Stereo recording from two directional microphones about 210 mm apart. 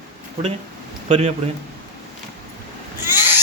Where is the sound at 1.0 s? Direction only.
30° right (ahead or behind).